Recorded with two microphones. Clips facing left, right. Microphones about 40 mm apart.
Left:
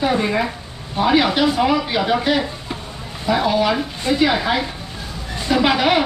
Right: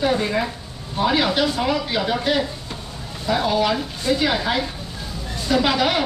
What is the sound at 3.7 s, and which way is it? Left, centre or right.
Speech, left.